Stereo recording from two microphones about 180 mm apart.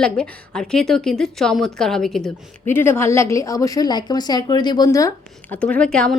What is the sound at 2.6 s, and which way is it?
A woman's voice, 15° left (ahead or behind).